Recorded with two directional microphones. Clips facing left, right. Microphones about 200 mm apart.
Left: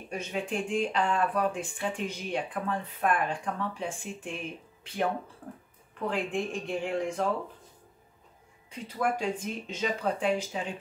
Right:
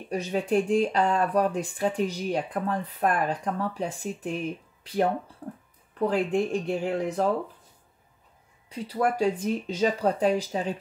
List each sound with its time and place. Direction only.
0.1 s speech: 40° right (ahead or behind)
5.4 s a sound: 35° right (ahead or behind)
5.9 s speech: 35° right (ahead or behind)
8.6 s speech: 35° right (ahead or behind)